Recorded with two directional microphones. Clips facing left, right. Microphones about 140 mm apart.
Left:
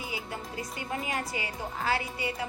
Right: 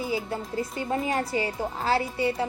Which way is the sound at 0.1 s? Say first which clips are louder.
Right 8 dB; 35° right (ahead or behind).